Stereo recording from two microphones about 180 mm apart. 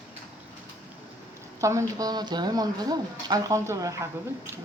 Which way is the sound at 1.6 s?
15° right (ahead or behind).